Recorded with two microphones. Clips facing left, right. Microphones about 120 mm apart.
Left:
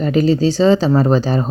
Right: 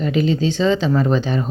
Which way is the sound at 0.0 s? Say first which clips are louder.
Left 4 dB; 40° left (ahead or behind).